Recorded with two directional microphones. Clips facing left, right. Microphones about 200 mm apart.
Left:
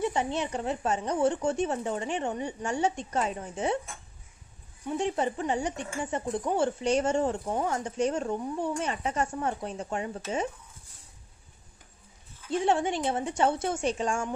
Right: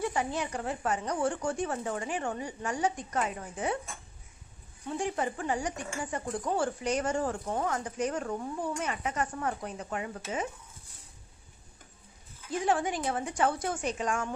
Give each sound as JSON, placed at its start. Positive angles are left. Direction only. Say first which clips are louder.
{"t": 0.0, "sound": "speech", "louder": "left 3 dB", "side_deg": 25}
{"t": 4.8, "sound": "speech", "louder": "left 3 dB", "side_deg": 25}
{"t": 12.4, "sound": "speech", "louder": "left 3 dB", "side_deg": 25}